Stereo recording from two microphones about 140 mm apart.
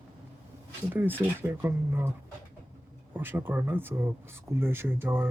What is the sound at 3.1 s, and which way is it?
Speech, 15° right (ahead or behind).